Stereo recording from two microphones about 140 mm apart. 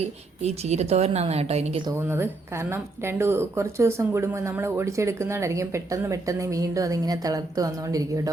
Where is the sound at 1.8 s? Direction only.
15° right (ahead or behind).